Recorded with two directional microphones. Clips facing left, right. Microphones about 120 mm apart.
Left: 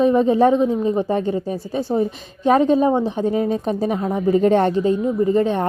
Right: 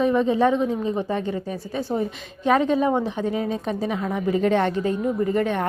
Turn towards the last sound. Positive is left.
turn(degrees=30)  # may be behind; listen again after turning